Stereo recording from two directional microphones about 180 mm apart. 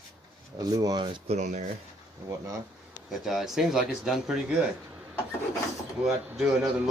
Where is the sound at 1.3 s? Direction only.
40° right (ahead or behind).